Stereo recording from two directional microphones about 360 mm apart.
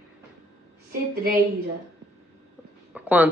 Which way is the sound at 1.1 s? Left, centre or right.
Right.